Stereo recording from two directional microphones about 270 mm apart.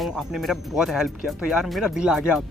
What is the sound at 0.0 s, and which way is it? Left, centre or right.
Speech, centre.